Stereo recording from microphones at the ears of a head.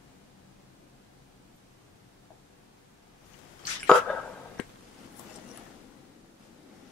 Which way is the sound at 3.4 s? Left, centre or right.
Left.